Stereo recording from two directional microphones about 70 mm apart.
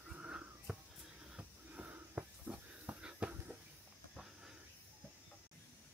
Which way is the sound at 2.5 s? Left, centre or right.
Right.